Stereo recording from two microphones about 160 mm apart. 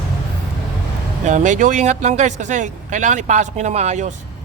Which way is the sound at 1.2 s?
50° right (ahead or behind).